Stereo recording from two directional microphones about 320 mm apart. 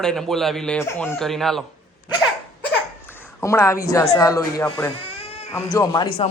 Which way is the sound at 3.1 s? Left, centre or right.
Centre.